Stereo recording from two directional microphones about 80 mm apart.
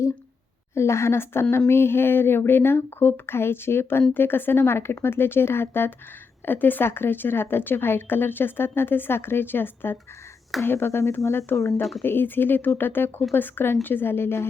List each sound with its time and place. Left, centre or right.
0.7 s a woman's voice: left